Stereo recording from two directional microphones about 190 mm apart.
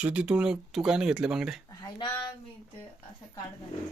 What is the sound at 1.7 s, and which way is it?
Speech, 20° left (ahead or behind).